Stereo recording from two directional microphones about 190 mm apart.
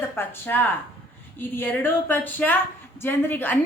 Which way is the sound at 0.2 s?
10° left (ahead or behind).